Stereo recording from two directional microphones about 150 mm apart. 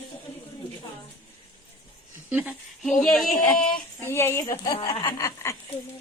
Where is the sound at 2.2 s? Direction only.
10° right (ahead or behind).